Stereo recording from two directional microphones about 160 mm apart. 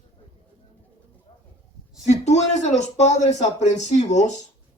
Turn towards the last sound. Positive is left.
turn(degrees=45)  # may be behind; listen again after turning